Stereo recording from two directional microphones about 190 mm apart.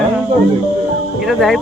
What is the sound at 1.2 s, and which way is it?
Speech, centre (ahead or behind).